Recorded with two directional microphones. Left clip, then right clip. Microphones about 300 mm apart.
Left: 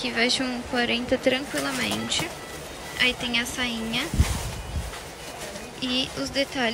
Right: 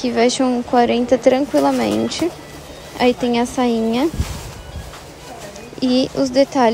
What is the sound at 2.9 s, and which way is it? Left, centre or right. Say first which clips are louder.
Speech: right 7 dB; centre.